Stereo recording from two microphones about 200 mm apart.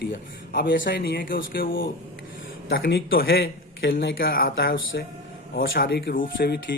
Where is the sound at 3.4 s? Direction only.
70° left (ahead or behind).